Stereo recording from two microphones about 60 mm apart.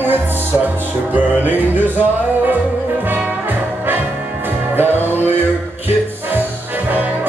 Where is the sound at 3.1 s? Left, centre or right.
Right.